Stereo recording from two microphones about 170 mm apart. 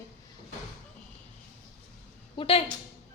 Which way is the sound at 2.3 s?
35° left (ahead or behind).